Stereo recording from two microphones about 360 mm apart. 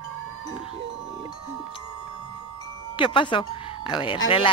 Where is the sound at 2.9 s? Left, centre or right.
Centre.